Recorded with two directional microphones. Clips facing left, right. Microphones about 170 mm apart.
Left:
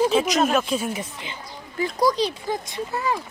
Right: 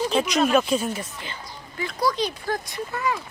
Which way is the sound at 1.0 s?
20° left (ahead or behind).